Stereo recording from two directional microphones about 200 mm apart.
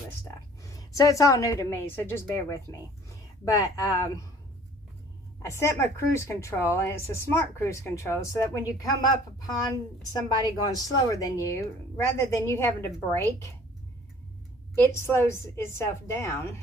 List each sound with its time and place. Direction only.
0.7 s a woman's voice: 15° left (ahead or behind)
5.4 s a woman's voice: 15° left (ahead or behind)
14.8 s a woman's voice: 10° left (ahead or behind)